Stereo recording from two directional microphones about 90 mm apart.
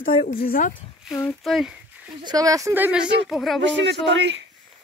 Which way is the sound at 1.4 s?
Centre (ahead or behind).